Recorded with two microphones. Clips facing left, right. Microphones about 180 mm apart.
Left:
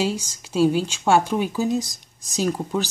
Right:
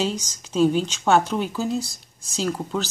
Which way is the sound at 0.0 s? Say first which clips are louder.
Left 1 dB; 10° left (ahead or behind).